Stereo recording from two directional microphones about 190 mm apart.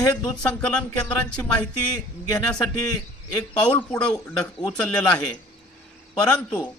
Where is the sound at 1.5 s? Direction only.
20° left (ahead or behind).